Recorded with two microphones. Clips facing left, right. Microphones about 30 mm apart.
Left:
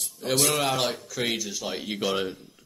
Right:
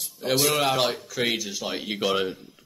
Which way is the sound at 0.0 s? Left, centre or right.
Centre.